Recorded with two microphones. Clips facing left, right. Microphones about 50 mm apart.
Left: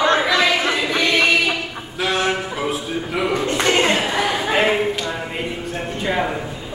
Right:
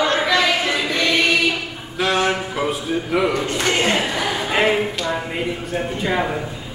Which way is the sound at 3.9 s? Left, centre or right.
Centre.